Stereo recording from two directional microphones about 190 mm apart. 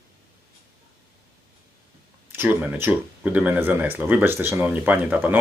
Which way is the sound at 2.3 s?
10° right (ahead or behind).